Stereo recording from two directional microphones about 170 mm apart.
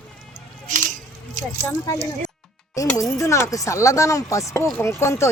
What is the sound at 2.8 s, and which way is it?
Speech, 20° left (ahead or behind).